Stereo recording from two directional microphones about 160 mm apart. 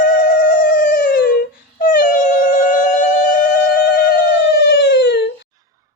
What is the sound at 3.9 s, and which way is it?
Howl, 80° left.